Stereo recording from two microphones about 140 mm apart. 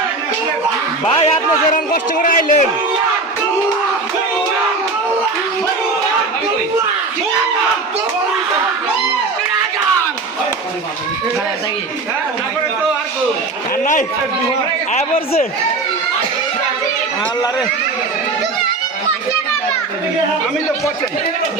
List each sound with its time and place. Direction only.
1.7 s speech: 75° left (ahead or behind)
14.9 s speech: 50° left (ahead or behind)